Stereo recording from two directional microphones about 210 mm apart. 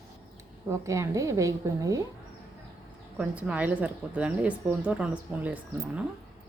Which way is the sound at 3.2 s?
5° right (ahead or behind).